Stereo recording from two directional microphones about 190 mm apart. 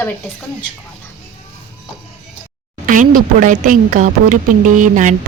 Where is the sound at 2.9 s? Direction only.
45° right (ahead or behind).